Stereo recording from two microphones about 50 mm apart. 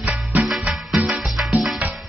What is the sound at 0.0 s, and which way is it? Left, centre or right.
Music, right.